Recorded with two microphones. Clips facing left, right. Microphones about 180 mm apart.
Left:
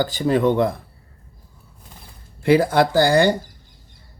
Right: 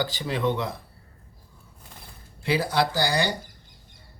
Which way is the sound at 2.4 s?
50° left (ahead or behind).